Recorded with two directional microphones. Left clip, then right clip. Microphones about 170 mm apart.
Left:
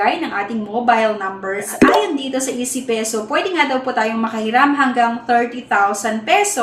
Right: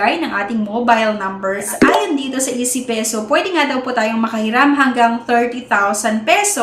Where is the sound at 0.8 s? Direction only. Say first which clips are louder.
Right 1 dB; 30° right (ahead or behind).